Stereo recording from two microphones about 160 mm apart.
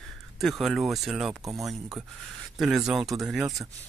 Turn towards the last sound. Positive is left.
turn(degrees=0)  # may be behind; listen again after turning